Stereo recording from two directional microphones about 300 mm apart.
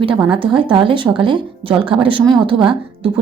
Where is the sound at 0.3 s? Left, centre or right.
Centre.